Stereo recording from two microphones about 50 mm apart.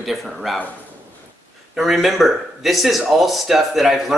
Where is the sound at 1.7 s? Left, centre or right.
Centre.